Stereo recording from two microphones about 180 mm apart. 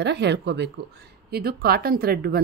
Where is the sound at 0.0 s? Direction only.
70° right (ahead or behind).